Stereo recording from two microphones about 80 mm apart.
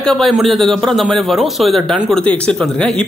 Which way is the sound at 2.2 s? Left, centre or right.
Centre.